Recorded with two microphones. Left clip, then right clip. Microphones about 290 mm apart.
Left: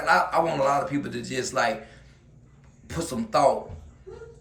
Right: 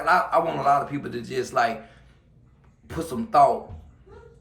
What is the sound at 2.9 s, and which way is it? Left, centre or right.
Speech, centre.